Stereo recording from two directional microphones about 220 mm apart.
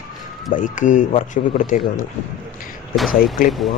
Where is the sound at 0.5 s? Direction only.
35° left (ahead or behind).